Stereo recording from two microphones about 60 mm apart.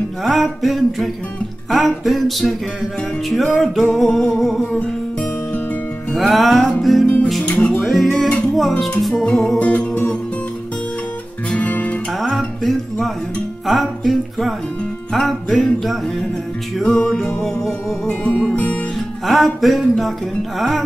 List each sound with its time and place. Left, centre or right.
0.2 s music: centre
4.8 s music: left
6.1 s music: centre
7.4 s music: centre
7.8 s music: centre
9.1 s music: centre
9.6 s music: left
11.5 s music: left
12.1 s music: centre; by 18.9 s left
19.2 s music: centre